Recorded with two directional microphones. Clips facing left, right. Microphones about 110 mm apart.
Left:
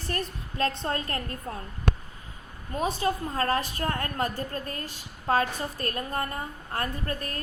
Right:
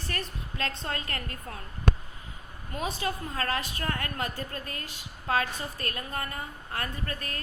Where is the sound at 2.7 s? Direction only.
35° left (ahead or behind).